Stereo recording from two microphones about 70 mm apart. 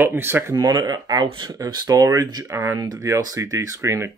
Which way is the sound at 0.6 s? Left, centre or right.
Right.